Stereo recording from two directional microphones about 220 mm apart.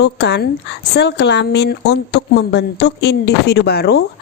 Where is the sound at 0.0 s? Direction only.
50° left (ahead or behind).